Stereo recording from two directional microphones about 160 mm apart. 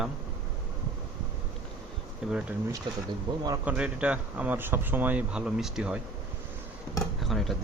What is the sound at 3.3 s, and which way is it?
Speech, 25° right (ahead or behind).